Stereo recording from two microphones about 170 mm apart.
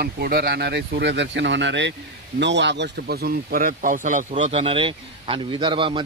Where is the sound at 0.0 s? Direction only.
65° right (ahead or behind).